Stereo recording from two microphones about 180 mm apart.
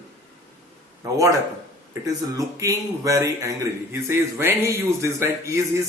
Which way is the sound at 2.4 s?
20° right (ahead or behind).